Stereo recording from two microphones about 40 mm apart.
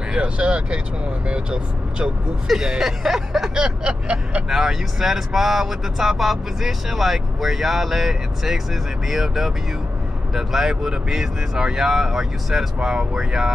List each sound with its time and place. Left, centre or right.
0.1 s speech: right
2.4 s speech: centre
3.5 s speech: right
4.5 s speech: centre